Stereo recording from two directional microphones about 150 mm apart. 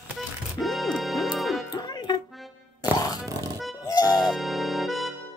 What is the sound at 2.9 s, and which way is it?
Grunt, 25° left (ahead or behind).